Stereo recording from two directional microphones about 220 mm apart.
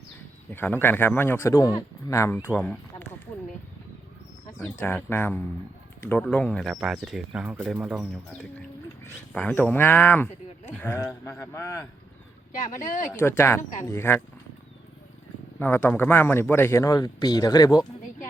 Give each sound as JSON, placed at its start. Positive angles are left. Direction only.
{"t": 0.5, "sound": "a man's voice", "side_deg": 10}
{"t": 4.5, "sound": "a man's voice", "side_deg": 10}
{"t": 12.5, "sound": "speech", "side_deg": 35}
{"t": 13.1, "sound": "a man's voice", "side_deg": 10}
{"t": 13.6, "sound": "speech", "side_deg": 35}
{"t": 13.8, "sound": "a man's voice", "side_deg": 10}
{"t": 15.5, "sound": "a man's voice", "side_deg": 10}